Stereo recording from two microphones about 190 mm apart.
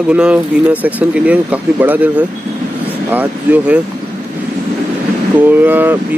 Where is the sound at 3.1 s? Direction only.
10° right (ahead or behind).